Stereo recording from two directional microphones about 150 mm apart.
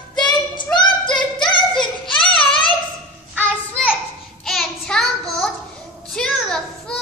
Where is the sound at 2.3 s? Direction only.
35° left (ahead or behind).